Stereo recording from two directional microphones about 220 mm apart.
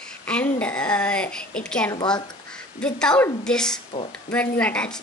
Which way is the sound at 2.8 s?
5° left (ahead or behind).